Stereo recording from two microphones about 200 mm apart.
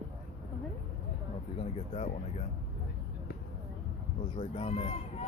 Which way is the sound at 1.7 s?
30° left (ahead or behind).